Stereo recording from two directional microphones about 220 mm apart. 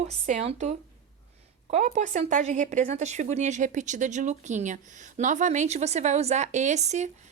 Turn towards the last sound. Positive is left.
turn(degrees=-30)  # may be behind; listen again after turning